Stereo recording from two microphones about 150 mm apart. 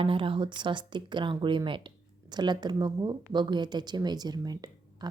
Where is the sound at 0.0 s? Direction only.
35° right (ahead or behind).